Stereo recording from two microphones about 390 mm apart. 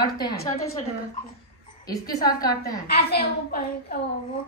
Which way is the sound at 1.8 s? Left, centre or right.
Centre.